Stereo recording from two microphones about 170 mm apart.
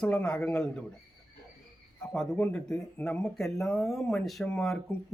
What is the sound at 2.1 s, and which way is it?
Speech, 5° left (ahead or behind).